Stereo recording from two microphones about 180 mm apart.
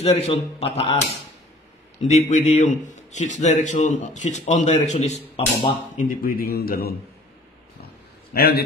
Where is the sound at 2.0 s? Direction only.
40° left (ahead or behind).